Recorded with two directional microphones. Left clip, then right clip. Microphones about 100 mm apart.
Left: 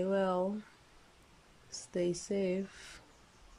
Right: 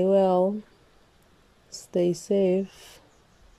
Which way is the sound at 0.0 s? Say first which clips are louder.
Right 12 dB; 35° right (ahead or behind).